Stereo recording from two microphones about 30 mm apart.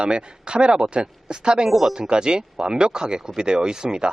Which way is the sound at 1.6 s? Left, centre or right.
Centre.